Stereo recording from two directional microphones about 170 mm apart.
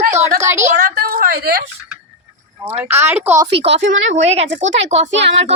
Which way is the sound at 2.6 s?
15° right (ahead or behind).